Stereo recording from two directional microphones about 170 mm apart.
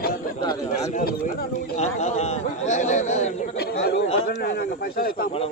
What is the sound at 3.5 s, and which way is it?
Speech, 80° left.